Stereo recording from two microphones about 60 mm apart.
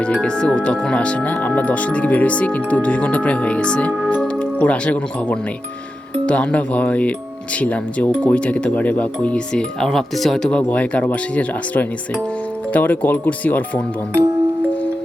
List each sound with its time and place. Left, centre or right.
0.0 s speech: centre
10.5 s speech: left